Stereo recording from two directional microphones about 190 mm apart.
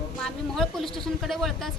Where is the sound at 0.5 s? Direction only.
Centre (ahead or behind).